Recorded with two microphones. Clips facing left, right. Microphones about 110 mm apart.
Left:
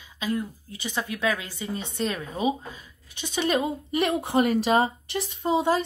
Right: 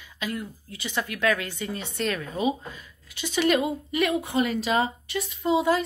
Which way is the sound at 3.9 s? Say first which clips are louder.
Left 2 dB; 35° left (ahead or behind).